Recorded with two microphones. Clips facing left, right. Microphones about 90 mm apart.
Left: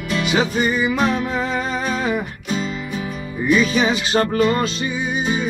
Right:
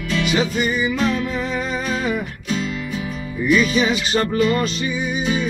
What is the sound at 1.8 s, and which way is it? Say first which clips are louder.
Humming: left 1 dB; 35° left (ahead or behind).